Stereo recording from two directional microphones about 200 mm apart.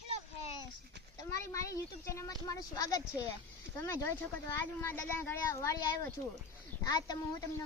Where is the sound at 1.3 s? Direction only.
15° left (ahead or behind).